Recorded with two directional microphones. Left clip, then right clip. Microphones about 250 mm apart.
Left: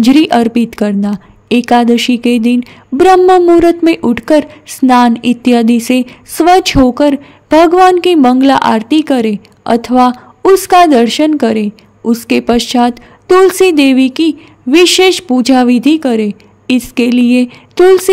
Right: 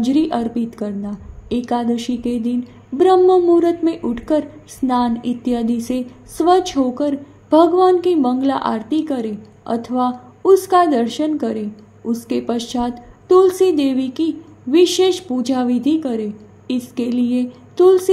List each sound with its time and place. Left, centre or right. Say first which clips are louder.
0.0 s a woman's voice: left 10 dB; left